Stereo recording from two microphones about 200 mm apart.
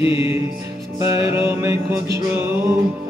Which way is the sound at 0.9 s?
15° right (ahead or behind).